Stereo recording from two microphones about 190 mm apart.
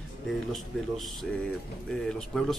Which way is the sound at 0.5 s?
Centre (ahead or behind).